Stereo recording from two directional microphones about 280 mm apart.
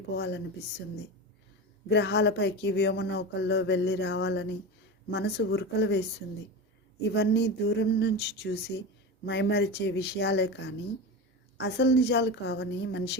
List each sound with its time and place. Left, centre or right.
0.2 s speech: left
1.9 s speech: left